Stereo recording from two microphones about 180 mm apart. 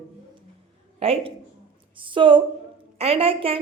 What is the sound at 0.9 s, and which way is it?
A woman's voice, 35° right (ahead or behind).